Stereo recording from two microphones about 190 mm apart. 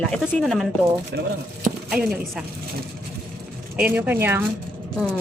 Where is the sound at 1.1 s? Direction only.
60° right (ahead or behind).